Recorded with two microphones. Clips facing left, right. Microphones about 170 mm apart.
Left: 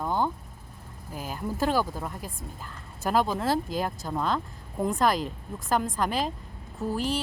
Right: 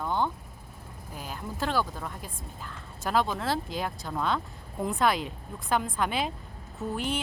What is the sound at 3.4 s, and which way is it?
Speech, 45° left (ahead or behind).